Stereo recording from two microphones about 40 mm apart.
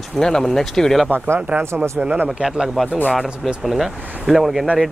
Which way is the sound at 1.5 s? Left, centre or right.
Right.